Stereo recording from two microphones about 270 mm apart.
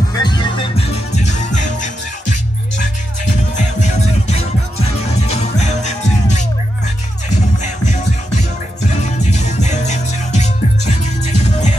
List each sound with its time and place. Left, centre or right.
0.1 s music: centre
3.5 s music: left
7.5 s music: left